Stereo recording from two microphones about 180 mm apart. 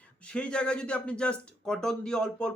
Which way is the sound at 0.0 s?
5° left (ahead or behind).